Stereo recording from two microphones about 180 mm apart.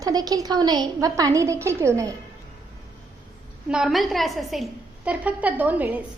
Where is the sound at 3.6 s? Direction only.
5° right (ahead or behind).